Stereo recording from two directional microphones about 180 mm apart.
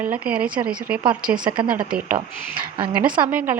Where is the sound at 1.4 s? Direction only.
25° right (ahead or behind).